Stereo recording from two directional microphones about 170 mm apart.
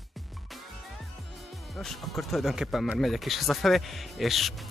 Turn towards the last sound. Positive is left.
turn(degrees=0)  # may be behind; listen again after turning